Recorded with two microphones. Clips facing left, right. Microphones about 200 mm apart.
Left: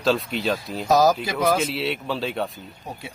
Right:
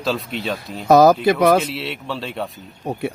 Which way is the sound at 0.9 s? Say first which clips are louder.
Right 7 dB; 60° right (ahead or behind).